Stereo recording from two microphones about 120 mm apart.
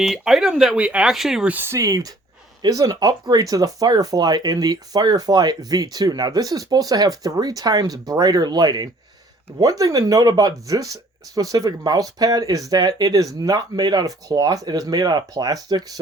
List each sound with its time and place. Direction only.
0.0 s speech: centre (ahead or behind)
1.5 s speech: 20° right (ahead or behind)